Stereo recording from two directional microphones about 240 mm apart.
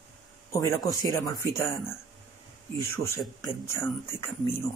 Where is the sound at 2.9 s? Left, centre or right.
Centre.